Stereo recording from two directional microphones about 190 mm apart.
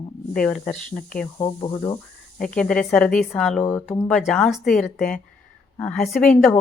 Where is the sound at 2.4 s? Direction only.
5° left (ahead or behind).